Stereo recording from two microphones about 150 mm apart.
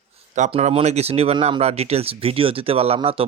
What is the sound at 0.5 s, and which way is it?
Speech, 40° right (ahead or behind).